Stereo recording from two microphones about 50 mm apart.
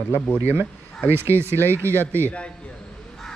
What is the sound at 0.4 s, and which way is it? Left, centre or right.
Speech, right.